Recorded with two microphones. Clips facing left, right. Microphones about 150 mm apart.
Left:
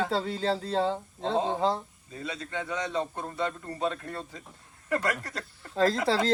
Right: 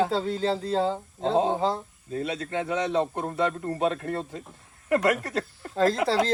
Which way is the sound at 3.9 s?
60° right (ahead or behind).